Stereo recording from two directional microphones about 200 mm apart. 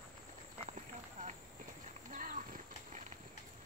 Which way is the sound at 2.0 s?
40° right (ahead or behind).